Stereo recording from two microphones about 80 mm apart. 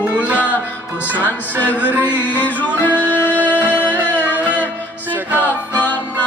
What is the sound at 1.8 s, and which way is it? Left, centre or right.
Music, centre.